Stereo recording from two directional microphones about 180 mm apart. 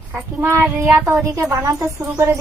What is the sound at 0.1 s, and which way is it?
Speech, 15° right (ahead or behind).